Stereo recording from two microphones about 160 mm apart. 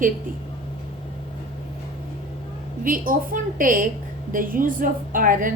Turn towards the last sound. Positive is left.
turn(degrees=-60)  # may be behind; listen again after turning